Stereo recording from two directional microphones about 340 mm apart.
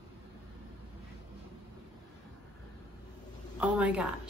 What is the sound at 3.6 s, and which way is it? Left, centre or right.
Speech, centre.